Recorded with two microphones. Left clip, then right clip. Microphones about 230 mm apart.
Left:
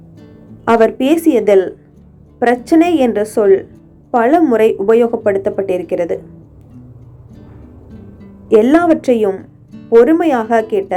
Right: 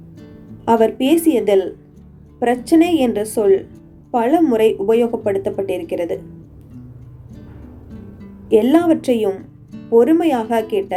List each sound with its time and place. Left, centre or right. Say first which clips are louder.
0.2 s music: even; centre
0.6 s a woman's voice: left 4 dB; centre
7.3 s music: even; centre
8.5 s a woman's voice: left 4 dB; centre